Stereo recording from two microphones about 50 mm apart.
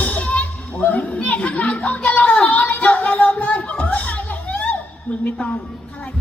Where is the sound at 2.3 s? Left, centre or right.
Left.